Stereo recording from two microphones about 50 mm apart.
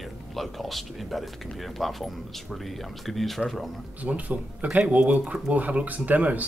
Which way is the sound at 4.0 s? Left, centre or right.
Right.